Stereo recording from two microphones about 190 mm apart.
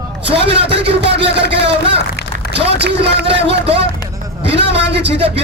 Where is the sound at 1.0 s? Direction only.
65° right (ahead or behind).